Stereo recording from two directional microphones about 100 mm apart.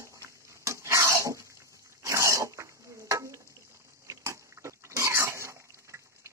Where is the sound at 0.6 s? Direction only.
30° right (ahead or behind).